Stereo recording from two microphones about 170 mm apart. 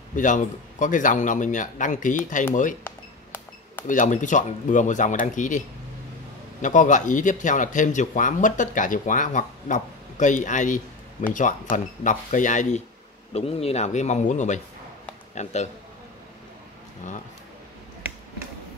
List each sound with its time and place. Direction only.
0.1 s speech: 50° left (ahead or behind)
2.8 s cash register: 10° left (ahead or behind)
3.8 s speech: 50° left (ahead or behind)
6.6 s a man's voice: 50° left (ahead or behind)